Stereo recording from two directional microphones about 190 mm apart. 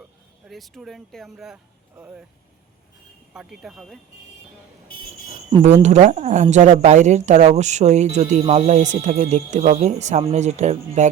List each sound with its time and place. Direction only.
0.4 s speech: centre (ahead or behind)
3.3 s speech: centre (ahead or behind)
5.3 s cricket: 25° right (ahead or behind)
5.8 s speech: 35° right (ahead or behind)